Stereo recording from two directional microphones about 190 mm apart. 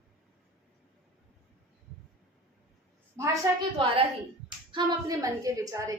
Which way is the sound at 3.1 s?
15° right (ahead or behind).